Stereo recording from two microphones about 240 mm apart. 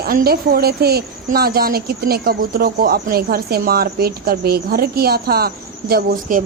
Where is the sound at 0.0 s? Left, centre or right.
Right.